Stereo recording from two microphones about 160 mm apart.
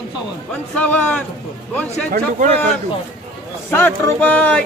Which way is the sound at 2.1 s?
60° right (ahead or behind).